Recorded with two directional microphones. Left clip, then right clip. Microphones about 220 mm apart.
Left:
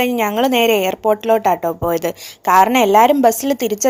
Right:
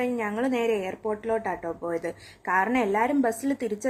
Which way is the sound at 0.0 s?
35° left (ahead or behind).